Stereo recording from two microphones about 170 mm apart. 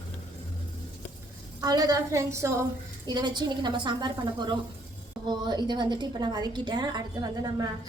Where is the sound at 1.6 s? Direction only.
20° right (ahead or behind).